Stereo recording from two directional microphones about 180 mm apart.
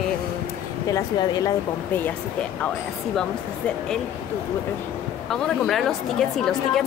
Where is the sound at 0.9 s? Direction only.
20° left (ahead or behind).